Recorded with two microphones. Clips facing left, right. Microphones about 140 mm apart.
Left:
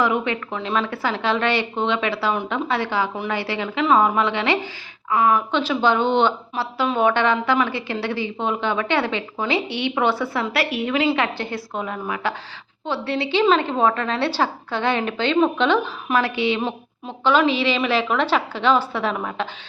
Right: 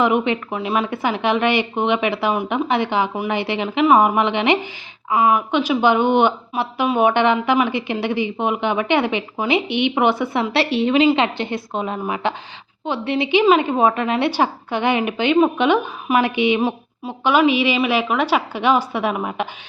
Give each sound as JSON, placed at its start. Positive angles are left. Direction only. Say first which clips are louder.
{"t": 0.0, "sound": "speech", "louder": "right 3 dB", "side_deg": -20}